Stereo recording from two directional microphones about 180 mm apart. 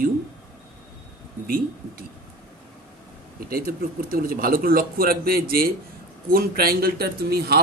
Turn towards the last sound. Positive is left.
turn(degrees=-60)  # may be behind; listen again after turning